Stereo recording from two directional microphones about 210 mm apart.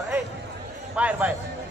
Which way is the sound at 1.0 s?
5° right (ahead or behind).